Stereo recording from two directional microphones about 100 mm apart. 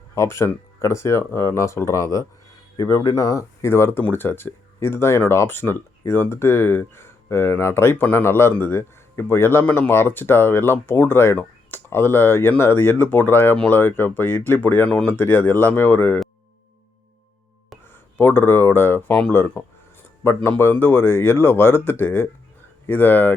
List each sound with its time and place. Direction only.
0.1 s a man's voice: 25° left (ahead or behind)
18.2 s a man's voice: 20° left (ahead or behind)